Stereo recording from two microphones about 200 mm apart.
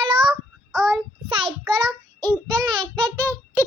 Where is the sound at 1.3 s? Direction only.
25° right (ahead or behind).